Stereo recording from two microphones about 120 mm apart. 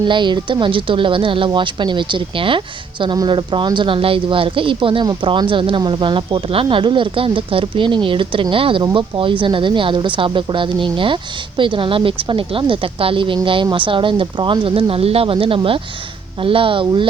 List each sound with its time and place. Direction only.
0.0 s speech: 40° right (ahead or behind)